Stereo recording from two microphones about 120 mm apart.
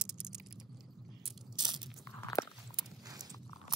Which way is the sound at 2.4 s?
25° left (ahead or behind).